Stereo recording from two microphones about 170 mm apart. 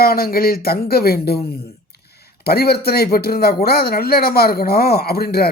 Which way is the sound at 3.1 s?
65° left (ahead or behind).